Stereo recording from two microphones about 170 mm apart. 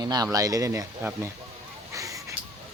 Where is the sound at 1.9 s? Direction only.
20° right (ahead or behind).